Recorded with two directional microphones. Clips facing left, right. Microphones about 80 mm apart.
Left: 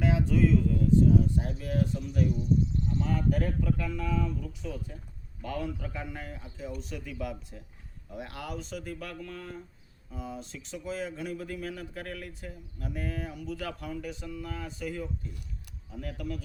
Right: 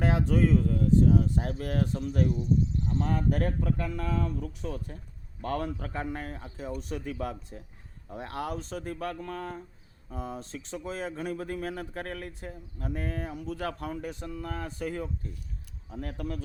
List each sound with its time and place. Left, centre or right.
0.0 s speech: right